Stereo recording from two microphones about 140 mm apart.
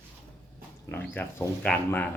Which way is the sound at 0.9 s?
15° left (ahead or behind).